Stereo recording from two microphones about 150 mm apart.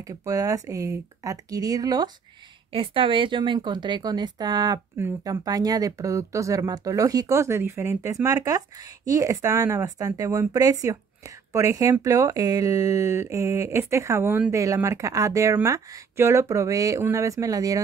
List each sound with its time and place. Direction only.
0.0 s speech: 20° right (ahead or behind)
2.7 s speech: 35° right (ahead or behind)